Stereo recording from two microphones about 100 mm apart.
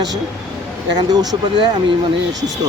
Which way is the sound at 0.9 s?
40° right (ahead or behind).